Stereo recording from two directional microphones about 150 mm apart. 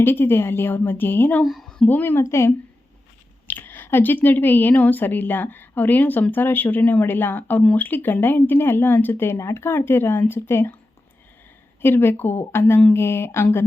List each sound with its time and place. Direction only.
0.0 s speech: 15° left (ahead or behind)
11.8 s speech: 15° left (ahead or behind)